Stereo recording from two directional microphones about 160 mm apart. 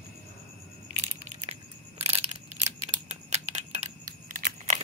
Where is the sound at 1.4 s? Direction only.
40° right (ahead or behind).